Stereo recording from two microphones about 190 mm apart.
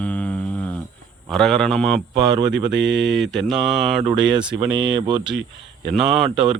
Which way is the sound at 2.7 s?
70° right (ahead or behind).